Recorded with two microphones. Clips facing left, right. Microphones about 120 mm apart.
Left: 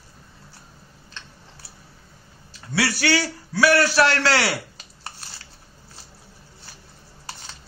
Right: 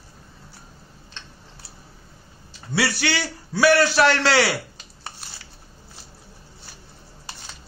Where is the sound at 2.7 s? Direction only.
25° right (ahead or behind).